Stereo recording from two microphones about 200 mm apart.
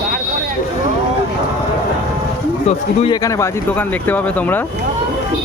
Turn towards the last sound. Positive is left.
turn(degrees=10)  # may be behind; listen again after turning